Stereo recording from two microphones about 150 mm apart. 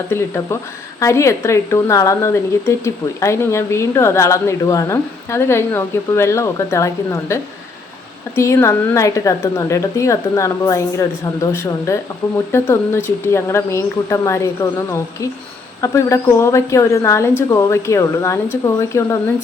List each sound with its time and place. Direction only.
0.1 s a woman's voice: 15° left (ahead or behind)
8.4 s a woman's voice: 20° left (ahead or behind)